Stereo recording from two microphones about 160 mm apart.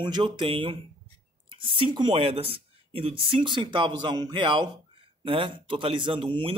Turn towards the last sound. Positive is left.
turn(degrees=-35)  # may be behind; listen again after turning